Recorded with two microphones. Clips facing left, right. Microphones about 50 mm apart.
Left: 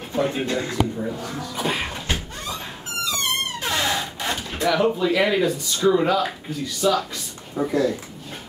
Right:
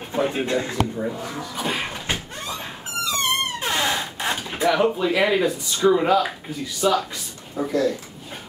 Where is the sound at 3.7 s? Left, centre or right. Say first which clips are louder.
Left 1 dB; centre.